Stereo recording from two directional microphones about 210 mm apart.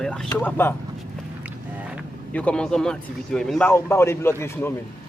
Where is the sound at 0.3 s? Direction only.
10° left (ahead or behind).